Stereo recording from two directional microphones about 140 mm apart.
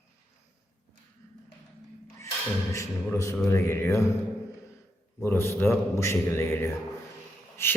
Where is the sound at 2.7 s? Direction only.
20° left (ahead or behind).